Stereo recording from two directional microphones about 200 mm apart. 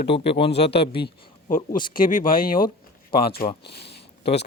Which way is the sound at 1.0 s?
40° left (ahead or behind).